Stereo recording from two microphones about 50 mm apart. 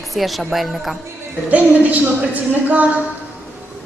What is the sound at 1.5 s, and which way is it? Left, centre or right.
A woman's voice, right.